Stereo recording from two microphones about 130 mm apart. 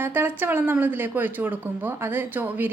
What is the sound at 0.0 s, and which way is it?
Speech, 15° right (ahead or behind).